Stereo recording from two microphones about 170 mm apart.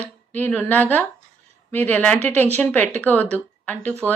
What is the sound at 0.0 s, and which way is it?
A woman's voice, 10° left (ahead or behind).